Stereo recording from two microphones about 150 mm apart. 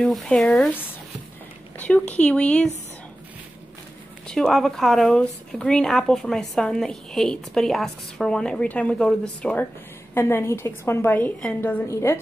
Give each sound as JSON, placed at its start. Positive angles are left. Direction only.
{"t": 0.0, "sound": "speech", "side_deg": 5}
{"t": 1.8, "sound": "a woman's voice", "side_deg": 10}
{"t": 4.3, "sound": "a woman's voice", "side_deg": 5}